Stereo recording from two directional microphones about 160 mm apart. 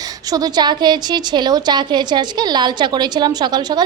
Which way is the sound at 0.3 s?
25° right (ahead or behind).